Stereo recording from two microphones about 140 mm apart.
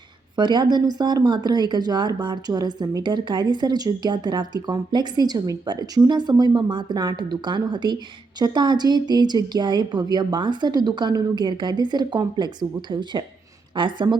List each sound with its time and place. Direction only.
0.3 s speech: 30° right (ahead or behind)